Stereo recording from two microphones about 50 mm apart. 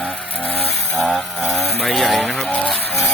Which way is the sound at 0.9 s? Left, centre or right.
Centre.